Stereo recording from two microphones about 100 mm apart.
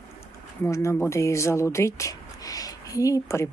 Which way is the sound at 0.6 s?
30° left (ahead or behind).